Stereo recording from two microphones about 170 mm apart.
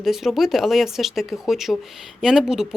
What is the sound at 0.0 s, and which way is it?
Speech, centre (ahead or behind).